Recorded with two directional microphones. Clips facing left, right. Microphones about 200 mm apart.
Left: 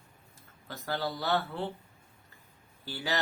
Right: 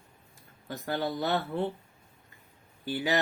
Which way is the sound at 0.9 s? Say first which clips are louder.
Right 2 dB; 20° right (ahead or behind).